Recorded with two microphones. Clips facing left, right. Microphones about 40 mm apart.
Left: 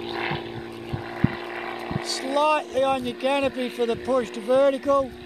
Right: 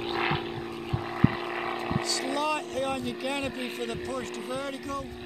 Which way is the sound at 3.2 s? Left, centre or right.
Left.